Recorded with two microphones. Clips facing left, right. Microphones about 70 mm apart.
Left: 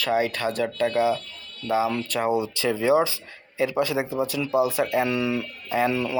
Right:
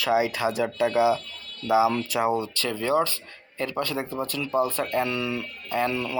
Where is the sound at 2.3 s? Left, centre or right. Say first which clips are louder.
Left 3 dB; centre.